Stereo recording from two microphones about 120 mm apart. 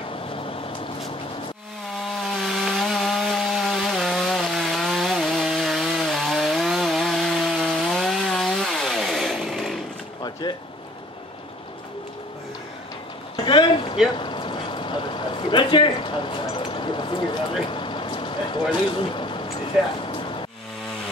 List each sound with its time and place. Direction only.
2.1 s chainsaw: centre (ahead or behind)
10.4 s rain: 40° left (ahead or behind)
13.4 s a sound: 40° left (ahead or behind)
14.1 s vehicle: 45° left (ahead or behind)
20.0 s music: 45° left (ahead or behind)